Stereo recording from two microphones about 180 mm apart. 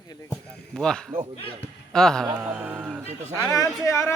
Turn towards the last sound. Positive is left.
turn(degrees=15)  # may be behind; listen again after turning